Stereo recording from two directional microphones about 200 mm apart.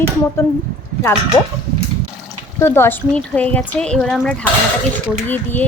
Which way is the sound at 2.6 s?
10° left (ahead or behind).